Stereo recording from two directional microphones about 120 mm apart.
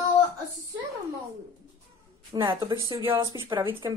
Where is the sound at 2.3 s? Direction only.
40° right (ahead or behind).